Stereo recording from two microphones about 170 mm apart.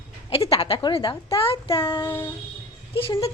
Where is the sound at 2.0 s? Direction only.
15° left (ahead or behind).